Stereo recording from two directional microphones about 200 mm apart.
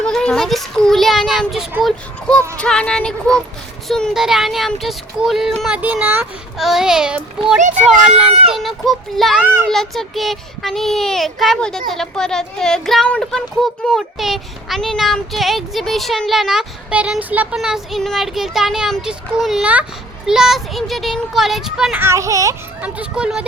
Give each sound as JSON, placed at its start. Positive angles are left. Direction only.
{"t": 0.0, "sound": "speech", "side_deg": 5}
{"t": 8.3, "sound": "speech", "side_deg": -30}
{"t": 8.5, "sound": "speech", "side_deg": 0}
{"t": 9.6, "sound": "speech", "side_deg": 0}